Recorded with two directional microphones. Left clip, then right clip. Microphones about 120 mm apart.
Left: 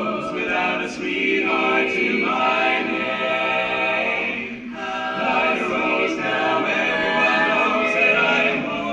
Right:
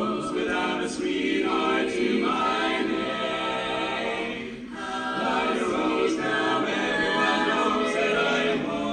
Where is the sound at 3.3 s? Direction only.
30° right (ahead or behind).